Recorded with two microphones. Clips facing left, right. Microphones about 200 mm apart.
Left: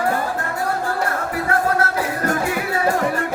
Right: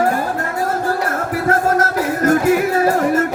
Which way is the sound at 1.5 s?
40° right (ahead or behind).